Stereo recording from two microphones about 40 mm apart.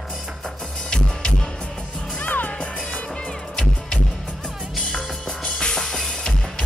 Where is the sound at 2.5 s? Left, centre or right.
Centre.